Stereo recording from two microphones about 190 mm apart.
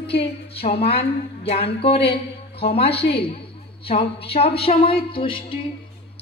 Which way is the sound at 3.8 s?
30° left (ahead or behind).